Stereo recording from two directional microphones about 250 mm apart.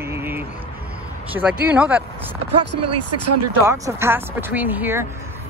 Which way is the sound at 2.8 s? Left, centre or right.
Right.